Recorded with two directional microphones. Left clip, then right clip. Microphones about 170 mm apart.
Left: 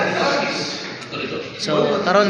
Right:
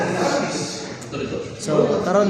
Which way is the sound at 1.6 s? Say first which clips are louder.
Left 1 dB; 20° right (ahead or behind).